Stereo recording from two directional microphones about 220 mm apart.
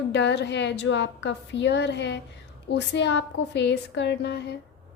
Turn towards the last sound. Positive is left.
turn(degrees=50)  # may be behind; listen again after turning